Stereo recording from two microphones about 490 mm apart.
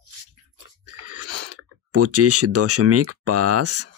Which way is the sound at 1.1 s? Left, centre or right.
Right.